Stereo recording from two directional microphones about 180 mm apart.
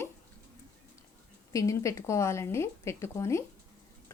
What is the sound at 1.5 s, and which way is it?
Speech, 20° left (ahead or behind).